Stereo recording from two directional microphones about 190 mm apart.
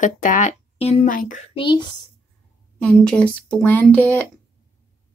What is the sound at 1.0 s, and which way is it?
Speech, 45° left (ahead or behind).